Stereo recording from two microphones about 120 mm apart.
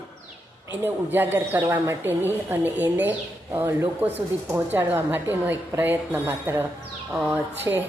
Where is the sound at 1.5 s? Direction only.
30° right (ahead or behind).